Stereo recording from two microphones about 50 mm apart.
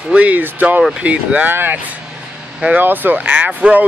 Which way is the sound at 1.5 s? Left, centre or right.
Right.